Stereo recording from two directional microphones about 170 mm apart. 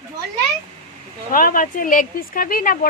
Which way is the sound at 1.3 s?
55° left (ahead or behind).